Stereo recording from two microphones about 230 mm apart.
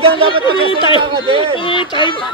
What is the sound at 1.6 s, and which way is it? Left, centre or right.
Speech, left.